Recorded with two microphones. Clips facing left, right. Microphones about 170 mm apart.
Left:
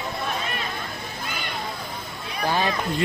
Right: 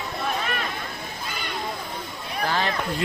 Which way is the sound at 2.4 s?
15° left (ahead or behind).